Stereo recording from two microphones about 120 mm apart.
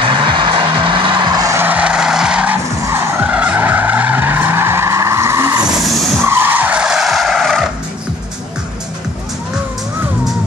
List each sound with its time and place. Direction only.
0.0 s music: 40° right (ahead or behind)
1.6 s skidding: 10° right (ahead or behind)
5.9 s skidding: centre (ahead or behind)
6.2 s vehicle: 20° right (ahead or behind); by 7.6 s centre (ahead or behind)